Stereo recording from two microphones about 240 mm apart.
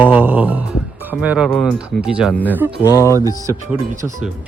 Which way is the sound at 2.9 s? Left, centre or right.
Centre.